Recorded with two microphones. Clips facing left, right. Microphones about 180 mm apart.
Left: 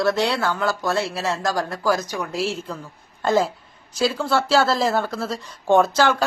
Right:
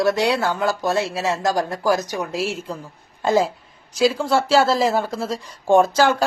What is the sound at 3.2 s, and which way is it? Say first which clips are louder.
Speech: right 1 dB; centre (ahead or behind).